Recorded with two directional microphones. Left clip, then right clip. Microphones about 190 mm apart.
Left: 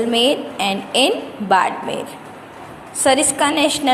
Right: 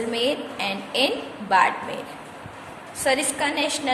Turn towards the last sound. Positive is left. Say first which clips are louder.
# left 7 dB
turn(degrees=25)  # may be behind; listen again after turning